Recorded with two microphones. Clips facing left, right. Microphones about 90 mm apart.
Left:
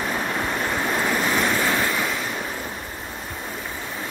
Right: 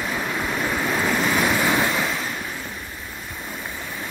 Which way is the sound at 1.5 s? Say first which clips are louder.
Right 2 dB; 15° right (ahead or behind).